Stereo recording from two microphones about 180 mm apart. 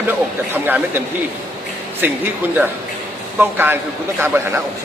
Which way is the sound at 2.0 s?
10° right (ahead or behind).